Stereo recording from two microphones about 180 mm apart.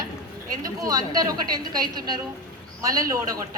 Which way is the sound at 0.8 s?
20° right (ahead or behind).